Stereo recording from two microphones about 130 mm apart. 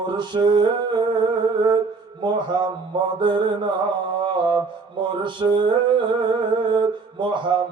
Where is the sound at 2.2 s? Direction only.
35° right (ahead or behind).